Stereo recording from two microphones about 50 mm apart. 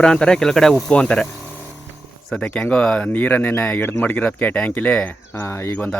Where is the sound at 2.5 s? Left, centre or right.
Left.